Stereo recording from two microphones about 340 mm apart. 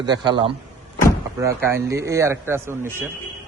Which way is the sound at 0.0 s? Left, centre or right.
Centre.